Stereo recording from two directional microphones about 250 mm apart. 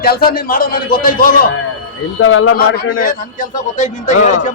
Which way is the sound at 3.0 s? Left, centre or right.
Left.